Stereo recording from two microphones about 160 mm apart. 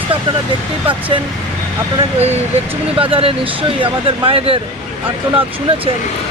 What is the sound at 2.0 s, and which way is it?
Speech, 40° right (ahead or behind).